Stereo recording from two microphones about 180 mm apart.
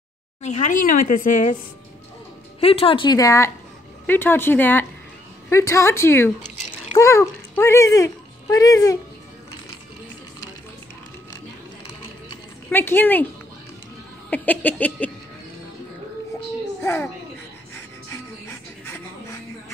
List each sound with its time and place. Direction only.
0.4 s a woman's voice: 40° left (ahead or behind)
2.6 s speech: 30° left (ahead or behind)
12.7 s speech: 10° left (ahead or behind)
14.3 s speech: 10° left (ahead or behind)
16.8 s speech: 10° left (ahead or behind)
17.7 s music: 15° left (ahead or behind)